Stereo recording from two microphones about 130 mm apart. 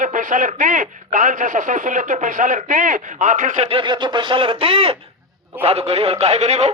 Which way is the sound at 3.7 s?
40° right (ahead or behind).